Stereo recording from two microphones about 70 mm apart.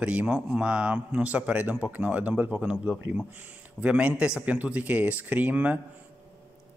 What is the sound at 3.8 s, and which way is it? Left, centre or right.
Speech, centre.